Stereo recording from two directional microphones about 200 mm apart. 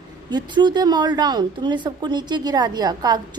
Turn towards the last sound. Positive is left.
turn(degrees=-20)  # may be behind; listen again after turning